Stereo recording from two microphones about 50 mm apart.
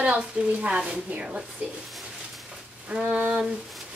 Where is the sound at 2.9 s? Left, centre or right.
Centre.